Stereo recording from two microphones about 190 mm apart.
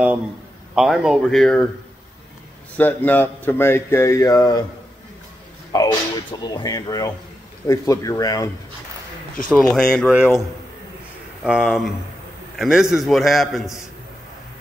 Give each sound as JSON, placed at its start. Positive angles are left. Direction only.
{"t": 0.7, "sound": "a man's voice", "side_deg": 0}
{"t": 2.8, "sound": "speech", "side_deg": 10}
{"t": 5.7, "sound": "speech", "side_deg": 20}
{"t": 9.8, "sound": "a man's voice", "side_deg": 5}
{"t": 11.4, "sound": "a man's voice", "side_deg": -5}